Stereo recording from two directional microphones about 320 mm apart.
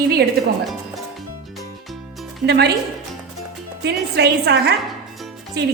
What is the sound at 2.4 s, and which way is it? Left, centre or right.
Speech, right.